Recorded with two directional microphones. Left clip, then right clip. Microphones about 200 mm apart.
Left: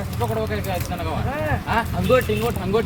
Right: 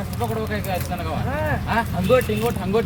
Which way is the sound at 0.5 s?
5° left (ahead or behind).